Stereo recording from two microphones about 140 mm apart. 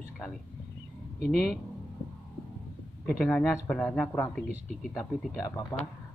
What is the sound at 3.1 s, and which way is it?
Speech, 5° left (ahead or behind).